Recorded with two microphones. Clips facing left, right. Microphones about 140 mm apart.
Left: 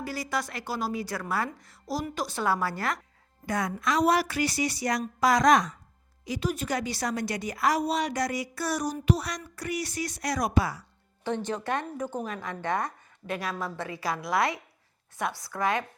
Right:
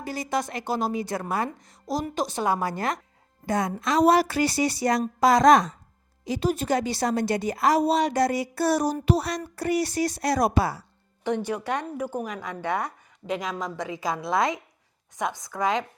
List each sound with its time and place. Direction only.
0.0 s a woman's voice: 20° right (ahead or behind)
11.2 s a woman's voice: 15° right (ahead or behind)